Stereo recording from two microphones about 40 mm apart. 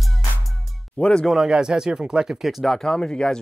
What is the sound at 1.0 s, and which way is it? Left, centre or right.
Music, left.